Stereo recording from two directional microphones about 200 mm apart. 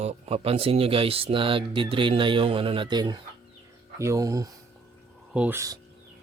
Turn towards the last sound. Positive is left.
turn(degrees=-15)  # may be behind; listen again after turning